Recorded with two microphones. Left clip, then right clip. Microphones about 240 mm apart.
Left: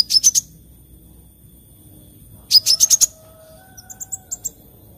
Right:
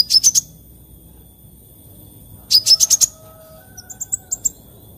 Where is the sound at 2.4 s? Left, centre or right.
Centre.